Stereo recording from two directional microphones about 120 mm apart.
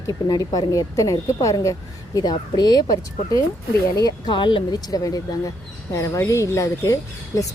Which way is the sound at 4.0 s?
35° left (ahead or behind).